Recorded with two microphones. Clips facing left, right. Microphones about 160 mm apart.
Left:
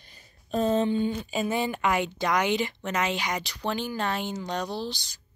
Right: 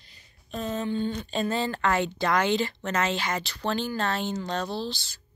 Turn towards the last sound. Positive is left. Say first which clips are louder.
# right 1 dB
turn(degrees=15)  # may be behind; listen again after turning